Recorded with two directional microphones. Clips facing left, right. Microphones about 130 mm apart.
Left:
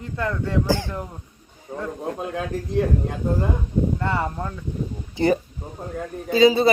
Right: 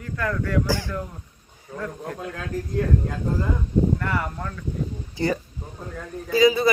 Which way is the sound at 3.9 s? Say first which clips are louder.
Left 3 dB; 25° left (ahead or behind).